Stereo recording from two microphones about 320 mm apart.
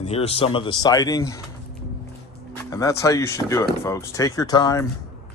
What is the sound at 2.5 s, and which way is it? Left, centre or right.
Speech, centre.